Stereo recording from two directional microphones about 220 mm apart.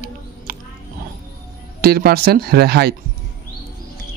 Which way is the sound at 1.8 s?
45° right (ahead or behind).